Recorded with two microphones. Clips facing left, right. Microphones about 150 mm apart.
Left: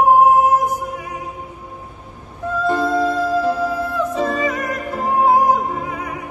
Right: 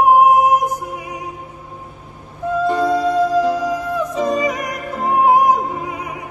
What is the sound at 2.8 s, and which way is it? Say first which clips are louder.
Music: right 2 dB; 15° right (ahead or behind).